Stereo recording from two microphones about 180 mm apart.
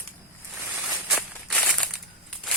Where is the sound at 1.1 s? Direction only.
5° left (ahead or behind).